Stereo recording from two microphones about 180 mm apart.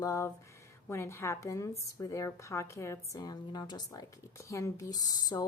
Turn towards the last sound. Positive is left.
turn(degrees=20)  # may be behind; listen again after turning